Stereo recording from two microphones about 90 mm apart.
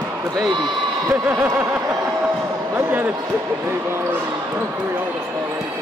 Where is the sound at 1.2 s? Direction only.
20° right (ahead or behind).